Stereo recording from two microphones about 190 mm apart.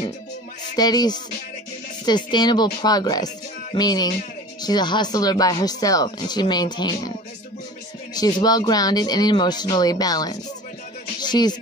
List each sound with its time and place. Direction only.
0.7 s speech: 20° left (ahead or behind)
11.1 s music: 20° left (ahead or behind)